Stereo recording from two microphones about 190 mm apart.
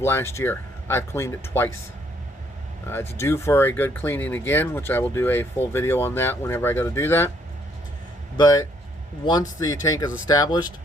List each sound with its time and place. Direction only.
0.0 s speech: 15° left (ahead or behind)
2.8 s speech: 10° left (ahead or behind)
8.4 s speech: 20° left (ahead or behind)